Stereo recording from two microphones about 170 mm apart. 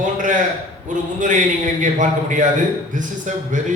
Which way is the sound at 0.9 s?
50° right (ahead or behind).